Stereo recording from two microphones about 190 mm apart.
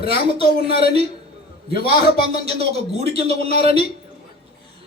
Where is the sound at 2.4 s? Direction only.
30° right (ahead or behind).